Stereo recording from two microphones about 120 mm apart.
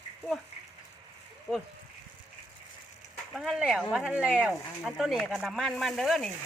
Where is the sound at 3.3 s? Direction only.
5° right (ahead or behind).